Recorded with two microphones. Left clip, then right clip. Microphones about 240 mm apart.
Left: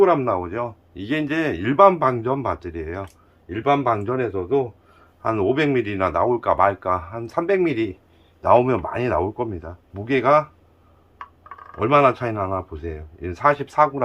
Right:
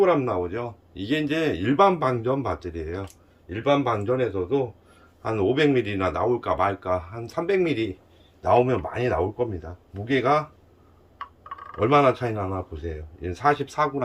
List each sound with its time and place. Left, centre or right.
0.0 s a man's voice: left